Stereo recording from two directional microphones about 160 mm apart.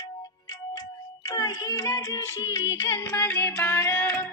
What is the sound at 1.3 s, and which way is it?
Child singing, 20° left (ahead or behind).